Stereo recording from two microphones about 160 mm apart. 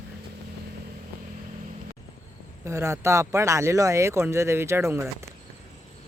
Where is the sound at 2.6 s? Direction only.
20° right (ahead or behind).